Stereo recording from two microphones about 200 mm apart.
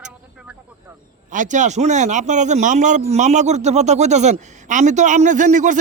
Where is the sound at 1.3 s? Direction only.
40° right (ahead or behind).